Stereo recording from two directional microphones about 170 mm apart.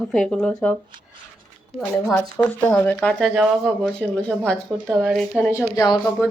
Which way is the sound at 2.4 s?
5° left (ahead or behind).